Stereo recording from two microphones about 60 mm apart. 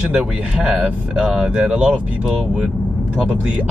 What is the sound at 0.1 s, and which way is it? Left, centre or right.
Speech, centre.